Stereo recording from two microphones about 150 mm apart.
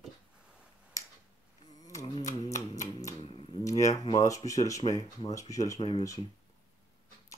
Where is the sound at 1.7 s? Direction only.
25° left (ahead or behind).